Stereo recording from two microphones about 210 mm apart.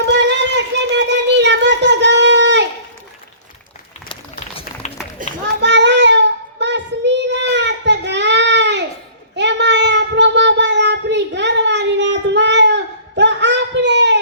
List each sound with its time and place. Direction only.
0.0 s child singing: 55° right (ahead or behind)
4.8 s run: 30° left (ahead or behind)
5.2 s children playing: 40° right (ahead or behind)
5.5 s child singing: 55° right (ahead or behind)